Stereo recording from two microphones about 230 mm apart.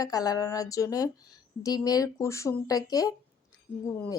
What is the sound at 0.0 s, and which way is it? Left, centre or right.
Speech, centre.